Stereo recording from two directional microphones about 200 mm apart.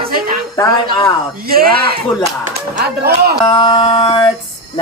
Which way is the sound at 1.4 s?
50° right (ahead or behind).